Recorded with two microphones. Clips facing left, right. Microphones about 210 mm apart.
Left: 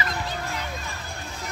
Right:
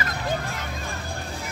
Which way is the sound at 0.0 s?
50° right (ahead or behind).